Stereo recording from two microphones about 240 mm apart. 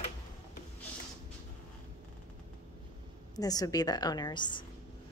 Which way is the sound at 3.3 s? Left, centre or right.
Centre.